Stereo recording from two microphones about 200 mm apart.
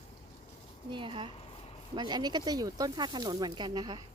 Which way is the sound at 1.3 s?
30° left (ahead or behind).